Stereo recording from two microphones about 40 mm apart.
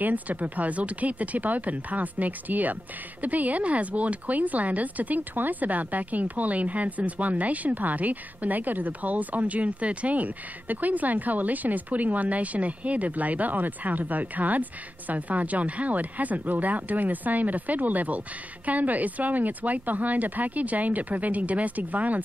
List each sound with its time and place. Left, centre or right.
0.0 s speech: right